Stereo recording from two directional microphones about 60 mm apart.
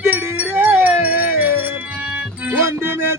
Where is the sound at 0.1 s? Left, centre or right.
Right.